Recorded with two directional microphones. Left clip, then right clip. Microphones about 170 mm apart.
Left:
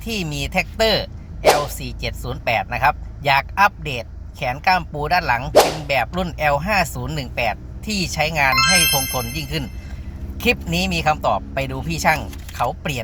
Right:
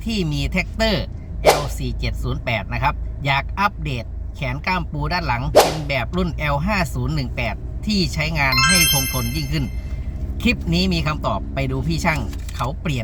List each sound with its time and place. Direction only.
0.0 s speech: 20° right (ahead or behind)
1.5 s whip: centre (ahead or behind)
1.8 s speech: 20° right (ahead or behind)
5.5 s whip: centre (ahead or behind)
5.9 s speech: 20° right (ahead or behind)